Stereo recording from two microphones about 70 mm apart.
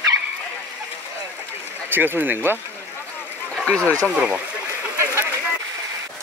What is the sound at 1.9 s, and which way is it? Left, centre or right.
Speech, right.